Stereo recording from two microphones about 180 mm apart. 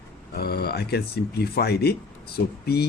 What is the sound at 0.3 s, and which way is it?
Speech, 60° left (ahead or behind).